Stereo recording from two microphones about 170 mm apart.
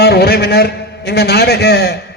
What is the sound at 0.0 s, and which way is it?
A man's voice, 70° left (ahead or behind).